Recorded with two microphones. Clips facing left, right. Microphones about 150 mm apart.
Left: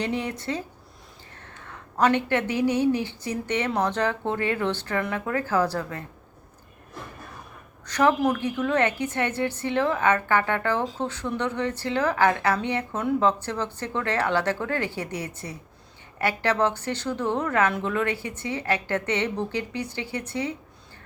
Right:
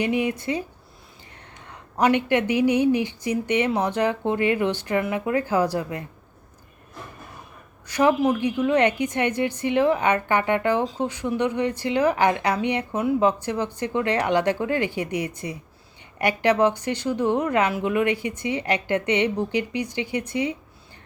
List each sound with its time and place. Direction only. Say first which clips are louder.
0.0 s speech: right 5 dB; 10° right (ahead or behind)
7.9 s speech: right 2 dB; 10° right (ahead or behind)